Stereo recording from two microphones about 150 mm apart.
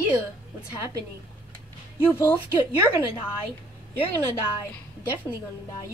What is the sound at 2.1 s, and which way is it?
Speech, 15° left (ahead or behind).